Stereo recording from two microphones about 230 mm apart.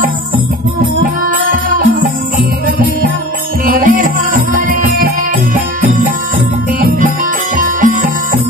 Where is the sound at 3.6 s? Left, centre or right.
Right.